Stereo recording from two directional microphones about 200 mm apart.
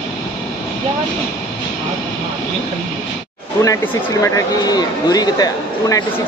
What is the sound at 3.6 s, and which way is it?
Speech, 15° left (ahead or behind).